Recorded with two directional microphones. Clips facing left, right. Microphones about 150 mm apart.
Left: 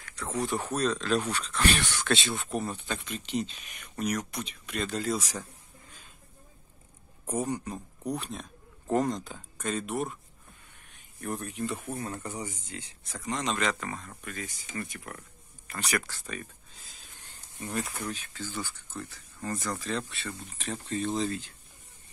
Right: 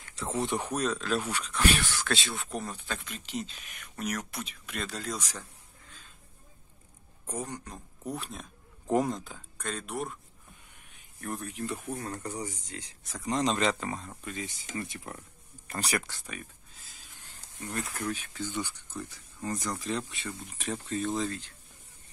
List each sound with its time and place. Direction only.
0.0 s speech: 25° right (ahead or behind); by 5.4 s 5° left (ahead or behind)
7.3 s speech: 10° left (ahead or behind)
11.1 s speech: centre (ahead or behind)
12.4 s speech: 35° right (ahead or behind)
14.8 s a sound: 25° right (ahead or behind)
15.7 s speech: 35° right (ahead or behind)
16.0 s speech: 15° right (ahead or behind)
17.6 s speech: 5° left (ahead or behind)
18.1 s speech: 15° right (ahead or behind)